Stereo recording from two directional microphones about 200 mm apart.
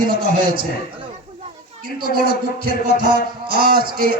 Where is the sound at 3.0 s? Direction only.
45° right (ahead or behind).